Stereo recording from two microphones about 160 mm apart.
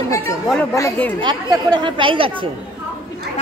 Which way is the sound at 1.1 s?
30° right (ahead or behind).